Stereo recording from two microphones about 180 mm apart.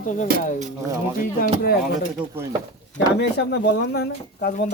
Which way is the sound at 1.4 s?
55° left (ahead or behind).